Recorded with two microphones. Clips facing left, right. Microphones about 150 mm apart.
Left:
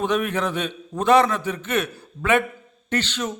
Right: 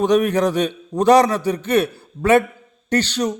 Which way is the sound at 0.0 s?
35° right (ahead or behind).